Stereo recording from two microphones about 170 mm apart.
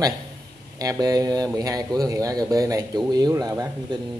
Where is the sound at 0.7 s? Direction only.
20° right (ahead or behind).